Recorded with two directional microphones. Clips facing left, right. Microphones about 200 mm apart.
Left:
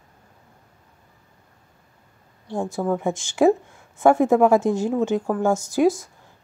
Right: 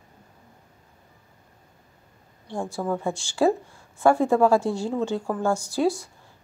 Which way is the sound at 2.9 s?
20° left (ahead or behind).